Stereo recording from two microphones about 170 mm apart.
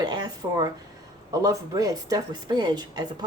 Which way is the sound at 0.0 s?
25° right (ahead or behind).